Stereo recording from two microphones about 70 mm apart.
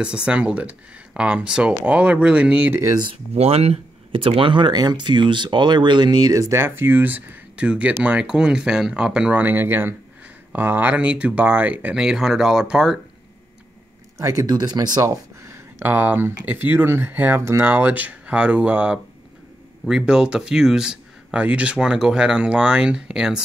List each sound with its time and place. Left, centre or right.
0.0 s speech: centre
4.6 s speech: right
6.3 s speech: right
6.6 s speech: right; by 9.4 s centre
9.4 s speech: right
11.9 s speech: centre
14.1 s speech: right
14.4 s speech: right
15.0 s a sound: right
15.8 s speech: right; by 23.4 s centre